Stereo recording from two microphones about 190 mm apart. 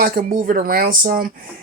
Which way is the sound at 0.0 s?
45° right (ahead or behind).